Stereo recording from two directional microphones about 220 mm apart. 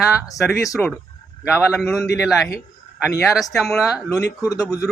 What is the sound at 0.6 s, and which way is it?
Speech, 15° left (ahead or behind).